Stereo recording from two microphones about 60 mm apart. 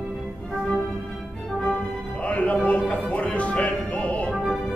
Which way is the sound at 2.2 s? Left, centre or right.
Left.